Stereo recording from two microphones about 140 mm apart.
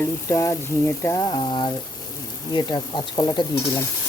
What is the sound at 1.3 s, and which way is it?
Speech, 35° left (ahead or behind).